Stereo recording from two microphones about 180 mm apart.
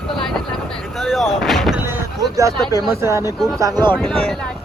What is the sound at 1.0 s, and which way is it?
Speech, centre (ahead or behind).